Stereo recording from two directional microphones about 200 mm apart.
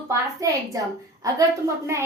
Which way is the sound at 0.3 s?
15° right (ahead or behind).